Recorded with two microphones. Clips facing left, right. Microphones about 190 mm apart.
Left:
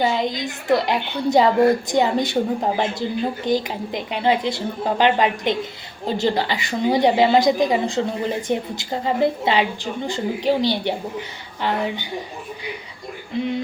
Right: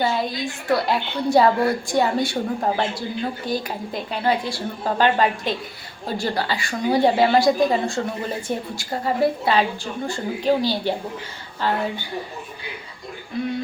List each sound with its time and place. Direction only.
0.0 s a woman's voice: 20° left (ahead or behind)
13.3 s a woman's voice: 20° left (ahead or behind)